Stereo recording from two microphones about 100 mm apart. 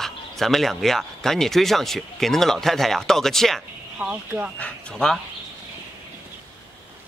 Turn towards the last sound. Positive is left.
turn(degrees=5)  # may be behind; listen again after turning